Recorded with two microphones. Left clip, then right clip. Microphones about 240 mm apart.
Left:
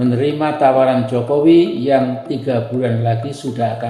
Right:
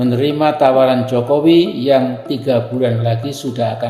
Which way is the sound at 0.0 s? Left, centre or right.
Right.